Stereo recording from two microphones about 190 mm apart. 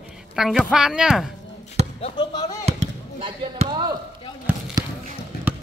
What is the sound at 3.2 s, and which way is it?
Speech, 25° right (ahead or behind).